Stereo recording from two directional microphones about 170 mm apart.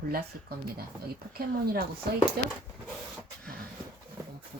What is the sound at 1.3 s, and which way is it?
Speech, 65° right (ahead or behind).